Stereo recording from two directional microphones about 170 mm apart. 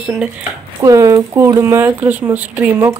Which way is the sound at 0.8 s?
20° right (ahead or behind).